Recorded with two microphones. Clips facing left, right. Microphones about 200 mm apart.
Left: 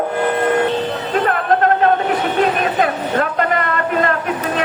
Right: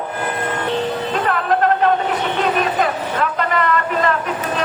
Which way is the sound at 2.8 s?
50° left (ahead or behind).